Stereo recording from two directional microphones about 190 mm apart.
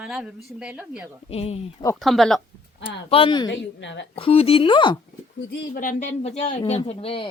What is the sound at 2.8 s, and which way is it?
Speech, 30° left (ahead or behind).